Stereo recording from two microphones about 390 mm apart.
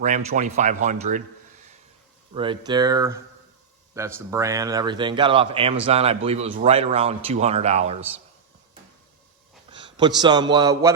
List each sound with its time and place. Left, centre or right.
0.0 s speech: centre
2.3 s speech: centre
9.6 s a sound: centre
10.2 s speech: centre